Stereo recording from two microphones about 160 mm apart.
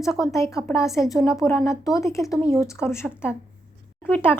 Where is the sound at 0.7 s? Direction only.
20° left (ahead or behind).